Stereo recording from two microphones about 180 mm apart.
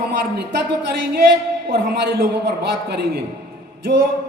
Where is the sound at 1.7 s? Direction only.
60° right (ahead or behind).